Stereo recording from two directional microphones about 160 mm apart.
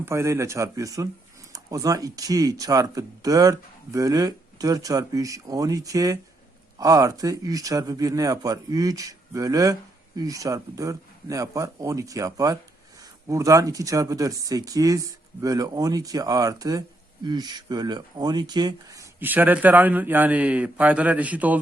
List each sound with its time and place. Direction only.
0.0 s a man's voice: 15° right (ahead or behind)
19.2 s a man's voice: 10° right (ahead or behind)